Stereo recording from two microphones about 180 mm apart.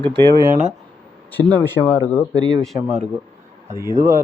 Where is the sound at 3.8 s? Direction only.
15° right (ahead or behind).